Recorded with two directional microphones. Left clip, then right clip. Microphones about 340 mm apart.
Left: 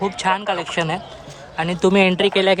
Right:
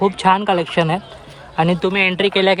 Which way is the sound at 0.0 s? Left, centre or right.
Centre.